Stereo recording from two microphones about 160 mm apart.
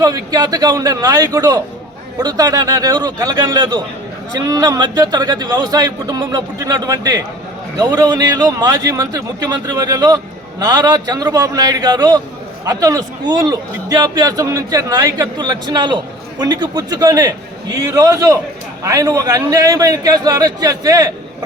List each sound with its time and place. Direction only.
0.0 s a man's voice: 25° right (ahead or behind)